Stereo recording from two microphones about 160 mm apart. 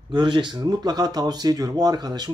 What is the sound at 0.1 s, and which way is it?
Speech, 30° right (ahead or behind).